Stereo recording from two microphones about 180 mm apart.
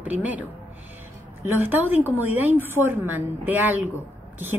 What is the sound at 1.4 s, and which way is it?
A woman's voice, 10° right (ahead or behind).